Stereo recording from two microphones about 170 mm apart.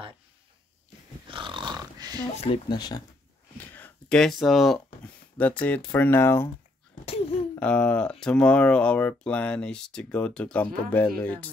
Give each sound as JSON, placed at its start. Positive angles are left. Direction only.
{"t": 1.3, "sound": "a sound", "side_deg": -30}
{"t": 2.4, "sound": "speech", "side_deg": 30}
{"t": 3.5, "sound": "speech", "side_deg": 10}
{"t": 7.5, "sound": "speech", "side_deg": 5}